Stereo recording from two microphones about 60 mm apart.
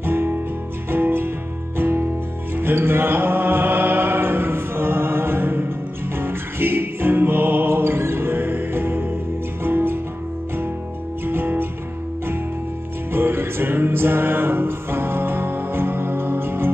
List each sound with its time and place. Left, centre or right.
0.0 s music: right
11.2 s music: right
13.1 s music: right